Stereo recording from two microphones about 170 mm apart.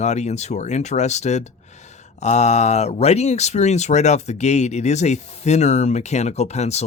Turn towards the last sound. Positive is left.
turn(degrees=40)  # may be behind; listen again after turning